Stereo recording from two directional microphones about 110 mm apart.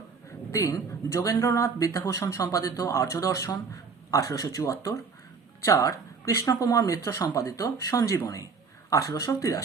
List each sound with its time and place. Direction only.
0.5 s speech: 25° left (ahead or behind)